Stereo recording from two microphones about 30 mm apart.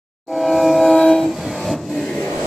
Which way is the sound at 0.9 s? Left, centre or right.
Left.